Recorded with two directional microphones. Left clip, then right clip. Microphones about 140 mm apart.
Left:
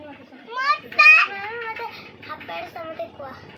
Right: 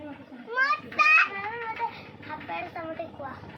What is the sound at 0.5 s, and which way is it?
Speech, 75° left (ahead or behind).